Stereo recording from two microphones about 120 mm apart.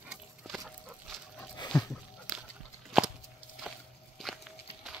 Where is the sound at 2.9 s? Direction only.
Centre (ahead or behind).